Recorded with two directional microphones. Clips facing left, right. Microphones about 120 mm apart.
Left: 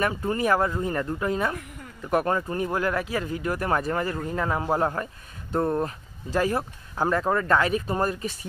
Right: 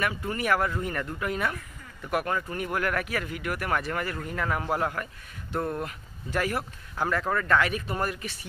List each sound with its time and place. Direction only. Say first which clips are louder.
0.0 s speech: left 5 dB; 35° left (ahead or behind)